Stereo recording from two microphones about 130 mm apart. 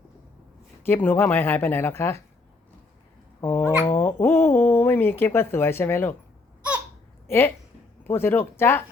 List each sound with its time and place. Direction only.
0.9 s speech: 15° left (ahead or behind)
3.4 s speech: 15° left (ahead or behind)
7.3 s a woman's voice: 20° left (ahead or behind)